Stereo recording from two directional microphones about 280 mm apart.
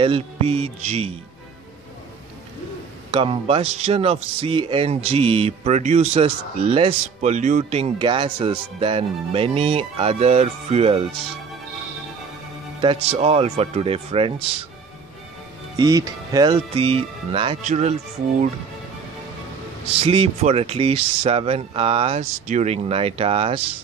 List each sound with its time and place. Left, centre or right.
0.0 s speech: right
3.1 s speech: centre
12.8 s speech: right
15.7 s speech: centre
19.8 s speech: right